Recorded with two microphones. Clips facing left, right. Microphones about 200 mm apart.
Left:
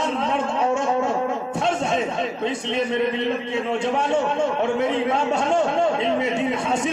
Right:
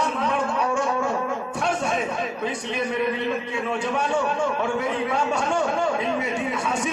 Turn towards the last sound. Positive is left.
turn(degrees=25)  # may be behind; listen again after turning